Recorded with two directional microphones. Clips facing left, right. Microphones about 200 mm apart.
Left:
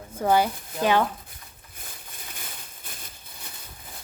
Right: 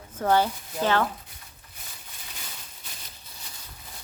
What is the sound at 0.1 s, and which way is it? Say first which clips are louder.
Speech: left 1 dB; 10° left (ahead or behind).